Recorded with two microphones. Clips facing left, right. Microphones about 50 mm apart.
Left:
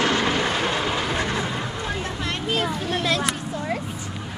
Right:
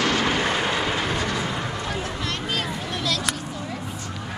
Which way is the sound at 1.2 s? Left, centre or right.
Left.